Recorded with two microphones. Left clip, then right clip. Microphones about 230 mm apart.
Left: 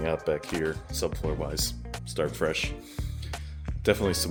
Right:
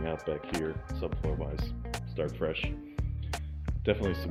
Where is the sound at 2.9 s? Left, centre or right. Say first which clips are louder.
Even; centre.